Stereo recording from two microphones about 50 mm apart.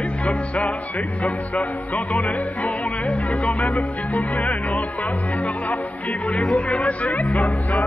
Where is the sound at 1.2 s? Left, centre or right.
Left.